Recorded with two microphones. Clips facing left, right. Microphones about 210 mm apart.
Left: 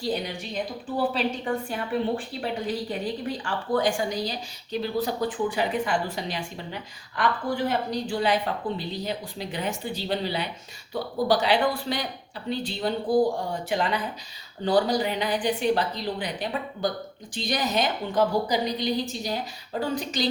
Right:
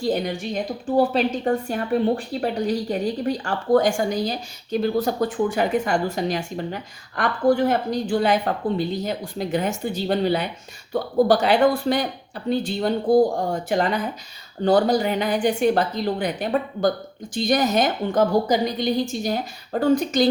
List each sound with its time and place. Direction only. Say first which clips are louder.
0.0 s a woman's voice: right 6 dB; 50° right (ahead or behind)